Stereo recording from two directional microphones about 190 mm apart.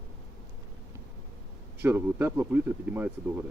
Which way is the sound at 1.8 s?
10° right (ahead or behind).